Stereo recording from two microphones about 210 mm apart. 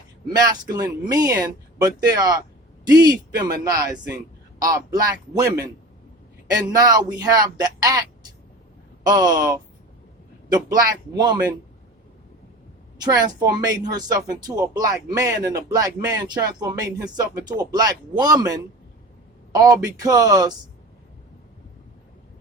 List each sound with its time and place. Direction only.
0.3 s speech: 20° right (ahead or behind)
6.5 s speech: 15° right (ahead or behind)
9.0 s speech: 15° right (ahead or behind)
13.0 s speech: 20° right (ahead or behind)